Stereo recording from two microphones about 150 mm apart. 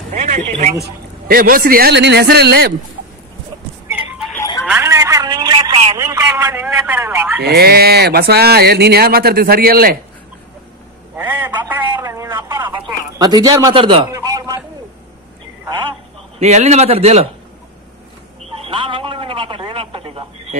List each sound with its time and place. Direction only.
0.1 s a man's voice: 55° right (ahead or behind)
1.2 s a man's voice: 70° right (ahead or behind); by 2.7 s 90° right
4.4 s telephone: 20° left (ahead or behind)
4.6 s a sound: 15° right (ahead or behind)
6.3 s a sound: 15° right (ahead or behind)
7.4 s speech: 90° right
11.1 s a sound: 15° right (ahead or behind)
12.6 s bird: 30° right (ahead or behind)
13.7 s a man's voice: 35° right (ahead or behind)
14.1 s a sound: 20° right (ahead or behind)
16.3 s a man's voice: 50° right (ahead or behind)
18.7 s telephone: 35° right (ahead or behind)